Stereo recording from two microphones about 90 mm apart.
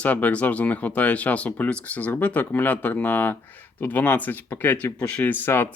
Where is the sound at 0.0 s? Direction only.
15° left (ahead or behind).